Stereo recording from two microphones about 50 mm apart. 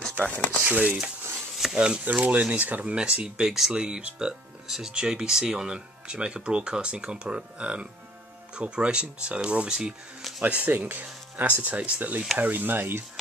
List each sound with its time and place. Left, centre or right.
0.2 s speech: left
0.7 s speech: right
1.6 s speech: centre
2.1 s speech: right
3.4 s speech: centre
3.7 s speech: centre
10.4 s speech: right
11.6 s speech: right